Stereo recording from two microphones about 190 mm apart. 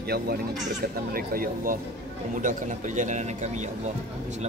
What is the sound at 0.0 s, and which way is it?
Speech, 55° right (ahead or behind).